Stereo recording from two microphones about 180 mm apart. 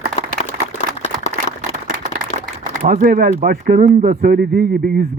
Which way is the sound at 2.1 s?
50° right (ahead or behind).